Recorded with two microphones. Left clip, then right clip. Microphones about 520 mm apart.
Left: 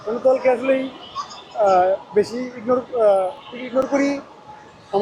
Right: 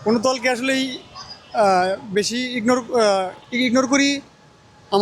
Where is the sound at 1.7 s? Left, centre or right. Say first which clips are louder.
Left 3 dB; right.